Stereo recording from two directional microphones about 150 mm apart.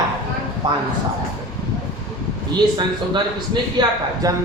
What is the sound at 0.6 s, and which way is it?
Speech, 30° right (ahead or behind).